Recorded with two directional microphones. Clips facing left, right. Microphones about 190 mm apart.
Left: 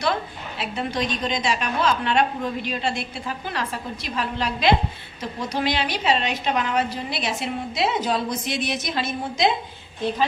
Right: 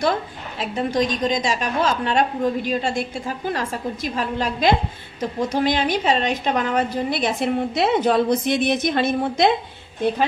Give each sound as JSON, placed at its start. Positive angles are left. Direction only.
{"t": 0.6, "sound": "a woman's voice", "side_deg": -40}